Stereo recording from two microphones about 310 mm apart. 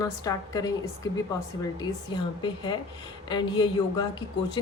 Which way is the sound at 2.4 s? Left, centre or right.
Centre.